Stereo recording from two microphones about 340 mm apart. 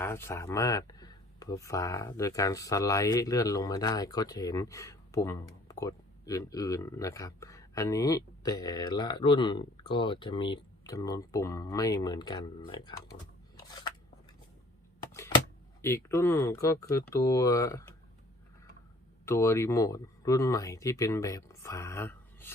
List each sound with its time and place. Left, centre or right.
0.0 s speech: centre
15.8 s speech: centre
19.2 s speech: centre